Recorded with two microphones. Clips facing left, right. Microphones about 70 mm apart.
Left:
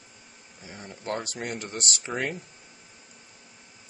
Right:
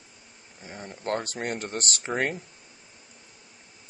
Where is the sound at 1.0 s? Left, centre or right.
Right.